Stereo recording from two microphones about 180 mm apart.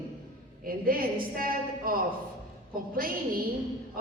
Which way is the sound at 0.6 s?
55° right (ahead or behind).